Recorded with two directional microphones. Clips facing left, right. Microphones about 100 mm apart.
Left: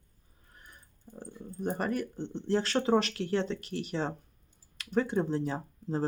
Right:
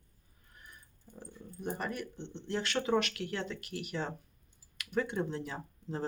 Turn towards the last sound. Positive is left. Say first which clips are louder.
# left 6 dB
turn(degrees=30)  # may be behind; listen again after turning